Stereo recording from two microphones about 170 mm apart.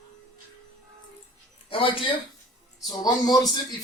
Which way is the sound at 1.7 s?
30° left (ahead or behind).